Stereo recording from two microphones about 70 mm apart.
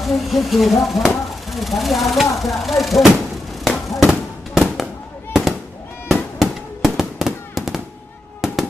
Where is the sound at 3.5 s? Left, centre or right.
Centre.